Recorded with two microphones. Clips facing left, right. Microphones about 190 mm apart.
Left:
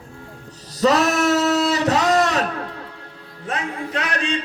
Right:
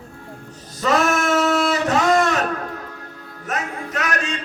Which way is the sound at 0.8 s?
35° left (ahead or behind).